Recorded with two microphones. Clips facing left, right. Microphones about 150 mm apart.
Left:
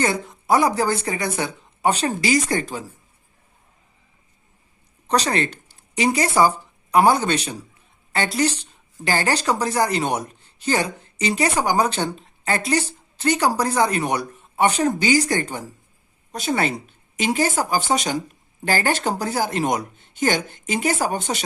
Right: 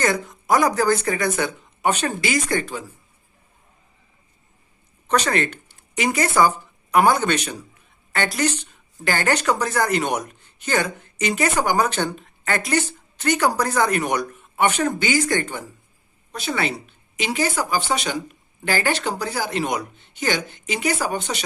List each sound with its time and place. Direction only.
0.0 s a woman's voice: 30° left (ahead or behind)
5.0 s a woman's voice: 35° left (ahead or behind)